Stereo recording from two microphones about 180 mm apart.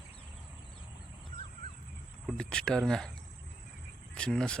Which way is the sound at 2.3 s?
5° left (ahead or behind).